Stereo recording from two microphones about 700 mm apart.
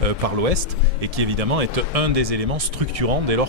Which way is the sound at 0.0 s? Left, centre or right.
Right.